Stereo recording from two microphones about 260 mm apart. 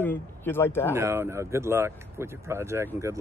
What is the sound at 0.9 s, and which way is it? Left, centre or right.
Speech, centre.